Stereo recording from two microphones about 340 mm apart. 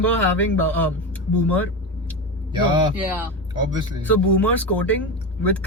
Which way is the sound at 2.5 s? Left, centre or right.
Centre.